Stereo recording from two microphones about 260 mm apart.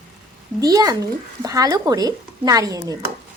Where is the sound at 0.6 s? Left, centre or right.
Centre.